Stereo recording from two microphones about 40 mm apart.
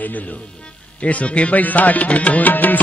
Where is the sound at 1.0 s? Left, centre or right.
Left.